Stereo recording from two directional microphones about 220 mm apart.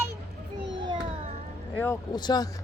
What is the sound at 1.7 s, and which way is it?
Speech, 10° left (ahead or behind).